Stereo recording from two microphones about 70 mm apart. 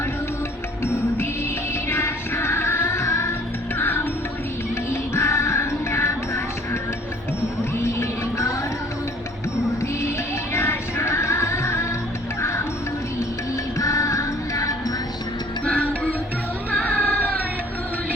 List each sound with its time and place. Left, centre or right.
1.9 s music: left
7.8 s music: left
10.5 s music: left
13.7 s music: left
15.6 s music: centre